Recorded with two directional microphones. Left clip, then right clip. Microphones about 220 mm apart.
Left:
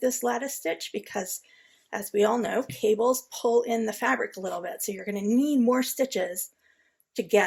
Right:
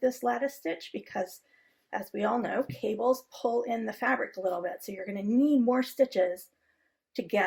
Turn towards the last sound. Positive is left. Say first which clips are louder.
# left 4 dB
turn(degrees=40)  # may be behind; listen again after turning